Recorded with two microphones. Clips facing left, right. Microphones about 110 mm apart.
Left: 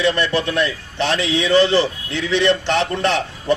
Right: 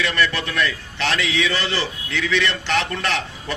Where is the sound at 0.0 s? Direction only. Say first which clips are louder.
Left 4 dB; 25° left (ahead or behind).